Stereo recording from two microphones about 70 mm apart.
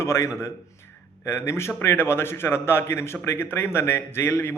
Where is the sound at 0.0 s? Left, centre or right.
Left.